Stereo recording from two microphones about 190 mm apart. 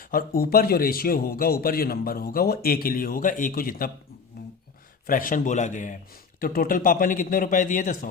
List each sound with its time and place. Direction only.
0.0 s a man's voice: 50° left (ahead or behind)
5.0 s a man's voice: 45° left (ahead or behind)